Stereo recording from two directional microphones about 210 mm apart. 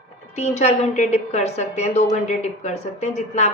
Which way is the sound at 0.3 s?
35° left (ahead or behind).